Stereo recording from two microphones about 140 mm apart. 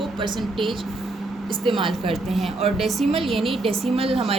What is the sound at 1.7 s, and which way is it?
Speech, 35° right (ahead or behind).